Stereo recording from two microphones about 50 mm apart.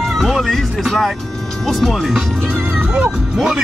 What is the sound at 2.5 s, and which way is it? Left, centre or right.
Music, right.